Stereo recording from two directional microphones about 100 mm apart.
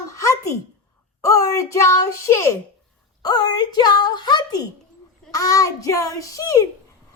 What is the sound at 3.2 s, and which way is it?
A woman's voice, 45° left (ahead or behind).